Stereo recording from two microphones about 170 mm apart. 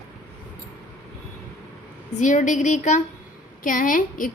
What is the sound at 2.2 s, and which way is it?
A woman's voice, 45° left (ahead or behind).